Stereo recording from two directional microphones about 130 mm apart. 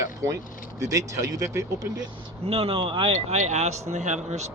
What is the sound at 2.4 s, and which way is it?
Speech, 50° right (ahead or behind).